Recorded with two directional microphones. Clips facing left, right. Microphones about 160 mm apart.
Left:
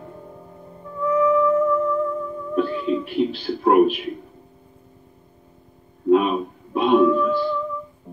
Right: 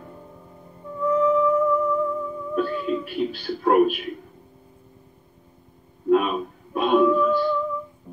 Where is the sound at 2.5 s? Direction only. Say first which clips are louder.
Left 3 dB; 25° left (ahead or behind).